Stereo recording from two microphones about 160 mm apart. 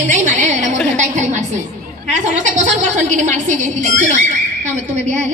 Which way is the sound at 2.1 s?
50° right (ahead or behind).